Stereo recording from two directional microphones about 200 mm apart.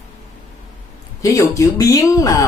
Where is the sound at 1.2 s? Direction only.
15° left (ahead or behind).